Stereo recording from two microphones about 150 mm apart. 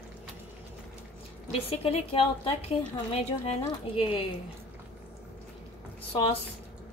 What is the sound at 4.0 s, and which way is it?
Speech, 35° left (ahead or behind).